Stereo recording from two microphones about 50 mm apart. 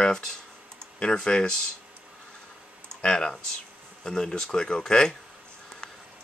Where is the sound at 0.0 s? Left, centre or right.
Centre.